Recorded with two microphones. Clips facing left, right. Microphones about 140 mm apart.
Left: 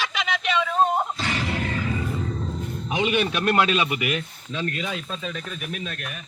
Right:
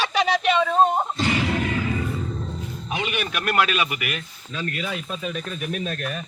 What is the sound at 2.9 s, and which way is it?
Speech, 20° left (ahead or behind).